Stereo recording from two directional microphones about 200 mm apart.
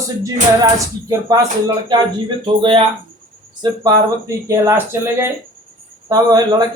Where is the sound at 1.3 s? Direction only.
20° right (ahead or behind).